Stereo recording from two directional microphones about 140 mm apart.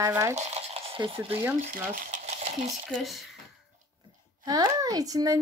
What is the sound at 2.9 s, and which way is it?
Speech, centre (ahead or behind).